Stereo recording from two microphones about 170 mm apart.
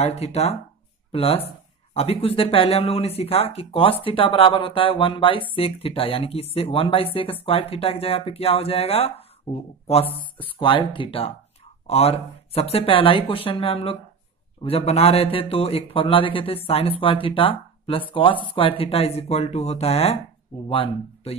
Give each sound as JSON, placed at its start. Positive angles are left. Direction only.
{"t": 0.0, "sound": "a man's voice", "side_deg": 40}